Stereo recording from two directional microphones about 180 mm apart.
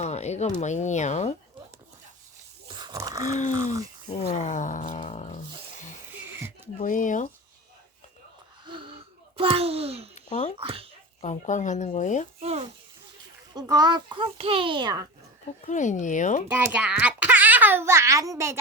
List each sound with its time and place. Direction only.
0.0 s a sound: 40° left (ahead or behind)
0.6 s speech: 40° left (ahead or behind)
2.7 s a sound: 20° right (ahead or behind)
3.3 s speech: 40° left (ahead or behind)
4.2 s roaring cats: 40° left (ahead or behind)
6.7 s speech: 45° left (ahead or behind)
8.6 s a sound: 30° right (ahead or behind)
10.2 s a sound: 40° left (ahead or behind)
10.6 s speech: 30° right (ahead or behind)
11.2 s speech: 40° left (ahead or behind)
12.4 s speech: 35° right (ahead or behind)
13.5 s a child's voice: 20° right (ahead or behind)
15.6 s speech: 45° left (ahead or behind)
16.5 s a child's voice: 10° right (ahead or behind)